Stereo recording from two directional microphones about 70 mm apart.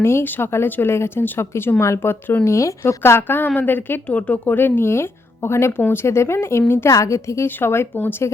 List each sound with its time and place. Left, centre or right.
0.0 s speech: left
2.8 s speech: left
6.9 s a woman's voice: left
7.4 s speech: left